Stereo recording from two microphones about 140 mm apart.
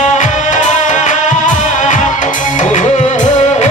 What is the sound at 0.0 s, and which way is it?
Music, 60° left (ahead or behind).